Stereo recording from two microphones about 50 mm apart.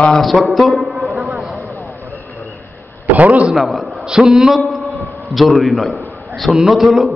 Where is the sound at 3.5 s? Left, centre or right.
Centre.